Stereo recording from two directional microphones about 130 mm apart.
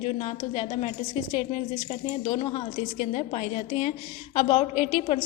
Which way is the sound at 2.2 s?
40° left (ahead or behind).